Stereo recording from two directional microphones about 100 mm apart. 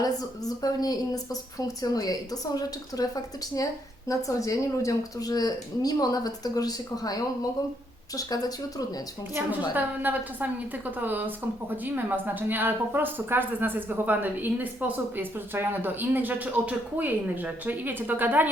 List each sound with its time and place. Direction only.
0.0 s a woman's voice: 40° left (ahead or behind)
9.3 s a woman's voice: 20° right (ahead or behind)